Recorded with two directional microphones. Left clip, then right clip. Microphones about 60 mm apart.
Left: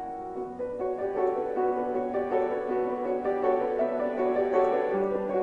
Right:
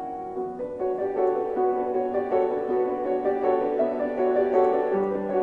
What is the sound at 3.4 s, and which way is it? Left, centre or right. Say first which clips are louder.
Music: right 1 dB; centre.